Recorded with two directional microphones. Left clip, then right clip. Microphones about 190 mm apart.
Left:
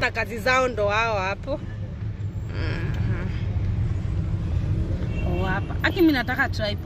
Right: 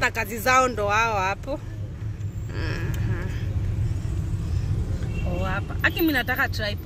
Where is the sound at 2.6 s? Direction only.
Centre (ahead or behind).